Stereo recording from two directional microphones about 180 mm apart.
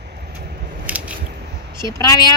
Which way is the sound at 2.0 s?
20° left (ahead or behind).